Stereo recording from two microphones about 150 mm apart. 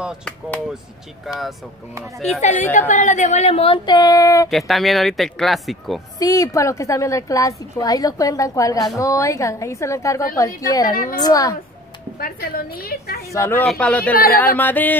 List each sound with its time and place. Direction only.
2.1 s speech: centre (ahead or behind)
2.9 s speech: 55° left (ahead or behind); by 4.5 s 25° left (ahead or behind)
4.5 s speech: centre (ahead or behind)
6.1 s a woman's voice: 25° left (ahead or behind)
10.9 s a woman's voice: 70° left (ahead or behind)
11.1 s a woman's voice: 25° left (ahead or behind)
12.2 s a woman's voice: 75° left (ahead or behind)
13.3 s a sound: 15° left (ahead or behind)
14.1 s a woman's voice: 75° left (ahead or behind)
14.4 s a sound: 10° left (ahead or behind)